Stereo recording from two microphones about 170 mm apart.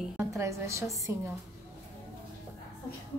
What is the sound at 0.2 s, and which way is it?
A woman's voice, 15° right (ahead or behind).